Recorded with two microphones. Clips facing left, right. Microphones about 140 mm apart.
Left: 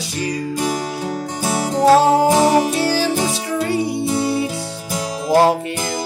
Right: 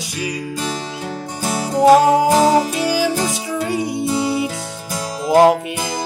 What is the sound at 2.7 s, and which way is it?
Music, 15° right (ahead or behind).